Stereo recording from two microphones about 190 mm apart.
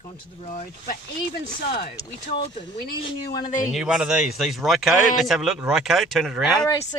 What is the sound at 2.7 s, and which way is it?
Speech, 50° left (ahead or behind).